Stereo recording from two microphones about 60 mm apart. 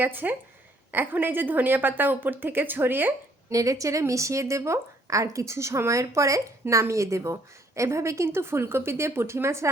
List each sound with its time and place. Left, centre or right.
0.0 s a woman's voice: right
3.5 s a woman's voice: right